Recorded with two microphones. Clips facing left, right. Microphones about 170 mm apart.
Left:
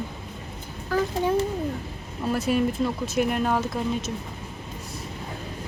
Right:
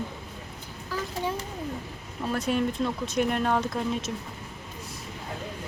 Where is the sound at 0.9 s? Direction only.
55° left (ahead or behind).